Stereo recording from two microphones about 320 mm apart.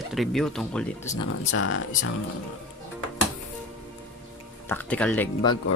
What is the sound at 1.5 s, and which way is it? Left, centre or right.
Speech, left.